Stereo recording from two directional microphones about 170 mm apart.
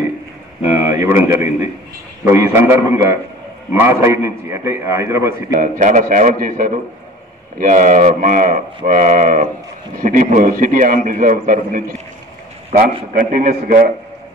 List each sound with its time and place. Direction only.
0.7 s a man's voice: 15° right (ahead or behind)
5.6 s a man's voice: 50° right (ahead or behind)
13.1 s a man's voice: 50° right (ahead or behind)